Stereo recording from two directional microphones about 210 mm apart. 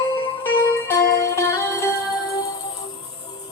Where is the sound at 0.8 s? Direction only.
15° left (ahead or behind).